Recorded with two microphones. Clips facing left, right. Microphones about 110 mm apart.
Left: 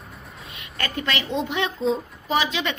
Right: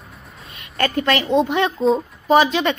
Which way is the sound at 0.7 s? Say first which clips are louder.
Right 8 dB; 45° right (ahead or behind).